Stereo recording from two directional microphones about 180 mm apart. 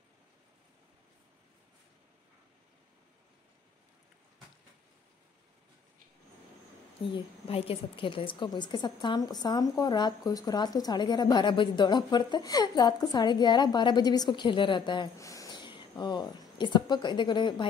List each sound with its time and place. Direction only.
7.1 s a woman's voice: 30° left (ahead or behind)